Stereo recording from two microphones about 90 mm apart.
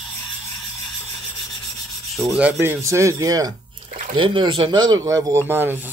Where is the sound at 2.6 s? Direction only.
30° right (ahead or behind).